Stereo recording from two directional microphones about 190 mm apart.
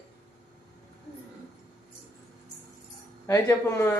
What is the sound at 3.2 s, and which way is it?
Speech, 15° left (ahead or behind).